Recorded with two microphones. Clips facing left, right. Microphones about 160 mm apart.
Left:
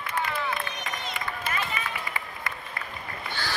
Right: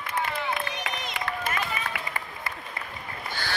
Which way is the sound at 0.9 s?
90° right.